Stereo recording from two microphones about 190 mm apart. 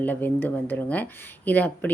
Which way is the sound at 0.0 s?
10° left (ahead or behind).